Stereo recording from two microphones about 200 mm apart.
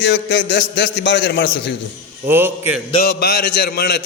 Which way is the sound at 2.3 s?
10° right (ahead or behind).